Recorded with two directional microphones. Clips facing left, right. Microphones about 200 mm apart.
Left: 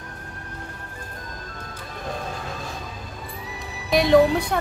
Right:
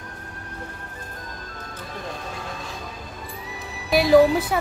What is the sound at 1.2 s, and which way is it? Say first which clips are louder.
Music: even; centre (ahead or behind).